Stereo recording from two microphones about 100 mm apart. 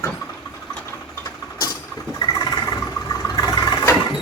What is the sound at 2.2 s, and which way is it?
Vehicle, 40° left (ahead or behind).